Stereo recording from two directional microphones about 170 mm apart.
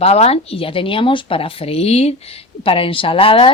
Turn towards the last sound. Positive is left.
turn(degrees=35)  # may be behind; listen again after turning